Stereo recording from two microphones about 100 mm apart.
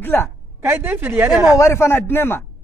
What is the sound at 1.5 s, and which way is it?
Speech, 30° left (ahead or behind).